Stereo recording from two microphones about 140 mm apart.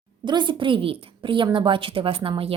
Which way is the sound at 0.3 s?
35° right (ahead or behind).